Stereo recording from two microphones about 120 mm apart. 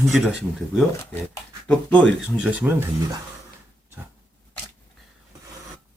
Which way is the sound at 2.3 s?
10° right (ahead or behind).